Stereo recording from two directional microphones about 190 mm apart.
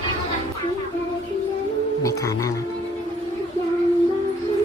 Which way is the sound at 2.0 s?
15° left (ahead or behind).